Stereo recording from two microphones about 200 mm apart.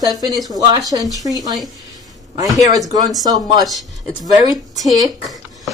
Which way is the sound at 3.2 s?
20° right (ahead or behind).